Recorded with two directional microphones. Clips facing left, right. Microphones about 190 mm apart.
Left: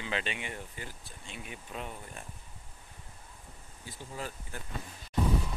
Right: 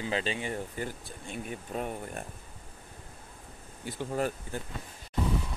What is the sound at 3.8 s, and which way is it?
Speech, 65° right (ahead or behind).